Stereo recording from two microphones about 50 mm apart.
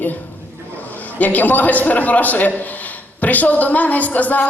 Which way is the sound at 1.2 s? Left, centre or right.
Left.